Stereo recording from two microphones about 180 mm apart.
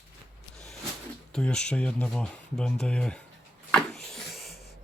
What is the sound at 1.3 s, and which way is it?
Speech, 5° left (ahead or behind).